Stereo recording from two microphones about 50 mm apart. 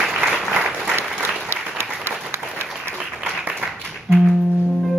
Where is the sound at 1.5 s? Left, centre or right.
Right.